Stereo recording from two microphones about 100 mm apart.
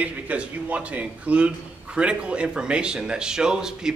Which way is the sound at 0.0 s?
15° right (ahead or behind).